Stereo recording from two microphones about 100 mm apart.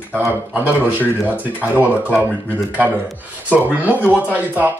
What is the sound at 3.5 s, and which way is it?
Speech, 15° right (ahead or behind).